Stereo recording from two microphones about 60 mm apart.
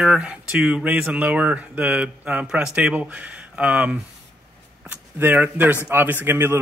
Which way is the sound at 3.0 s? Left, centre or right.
Right.